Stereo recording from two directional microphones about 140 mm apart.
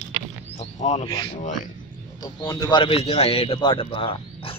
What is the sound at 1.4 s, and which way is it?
Speech, 65° left (ahead or behind).